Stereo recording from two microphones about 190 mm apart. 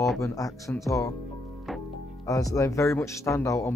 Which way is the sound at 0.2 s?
15° left (ahead or behind).